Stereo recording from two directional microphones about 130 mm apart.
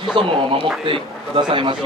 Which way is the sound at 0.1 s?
40° right (ahead or behind).